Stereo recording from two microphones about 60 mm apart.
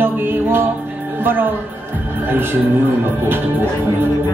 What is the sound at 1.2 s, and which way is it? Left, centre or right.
Speech, right.